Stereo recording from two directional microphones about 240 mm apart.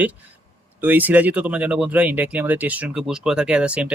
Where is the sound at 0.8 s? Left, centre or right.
Centre.